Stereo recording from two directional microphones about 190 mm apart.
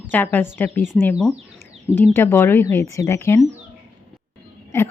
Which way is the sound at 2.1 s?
10° left (ahead or behind).